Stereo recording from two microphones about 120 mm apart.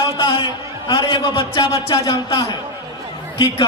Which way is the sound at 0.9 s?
40° left (ahead or behind).